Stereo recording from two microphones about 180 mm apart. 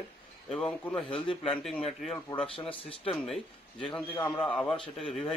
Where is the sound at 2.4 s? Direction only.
30° left (ahead or behind).